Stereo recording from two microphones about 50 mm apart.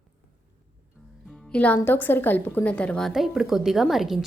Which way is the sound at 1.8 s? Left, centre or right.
Left.